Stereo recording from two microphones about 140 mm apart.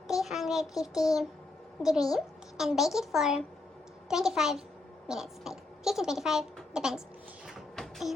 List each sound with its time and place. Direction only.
0.1 s child singing: centre (ahead or behind)
2.1 s a child's voice: centre (ahead or behind)
7.4 s a sound: centre (ahead or behind)